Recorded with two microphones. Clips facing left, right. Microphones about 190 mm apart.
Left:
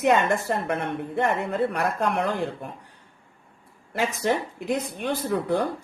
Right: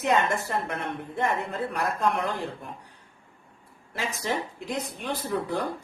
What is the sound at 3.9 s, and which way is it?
Speech, 65° left (ahead or behind).